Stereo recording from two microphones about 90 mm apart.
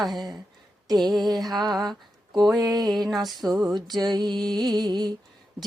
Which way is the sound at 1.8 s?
Centre (ahead or behind).